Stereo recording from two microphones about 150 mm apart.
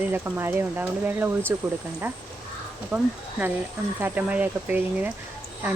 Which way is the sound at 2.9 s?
10° right (ahead or behind).